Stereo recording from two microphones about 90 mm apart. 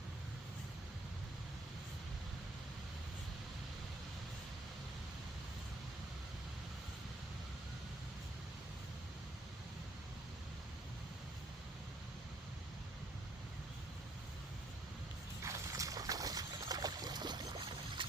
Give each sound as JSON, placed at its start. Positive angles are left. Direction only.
{"t": 15.4, "sound": "boat", "side_deg": -35}